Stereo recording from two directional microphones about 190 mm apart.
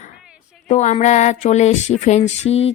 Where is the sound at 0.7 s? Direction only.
40° left (ahead or behind).